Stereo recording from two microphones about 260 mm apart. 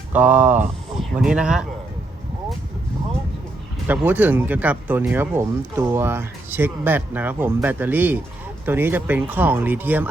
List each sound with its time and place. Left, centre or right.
0.1 s speech: centre
3.8 s speech: centre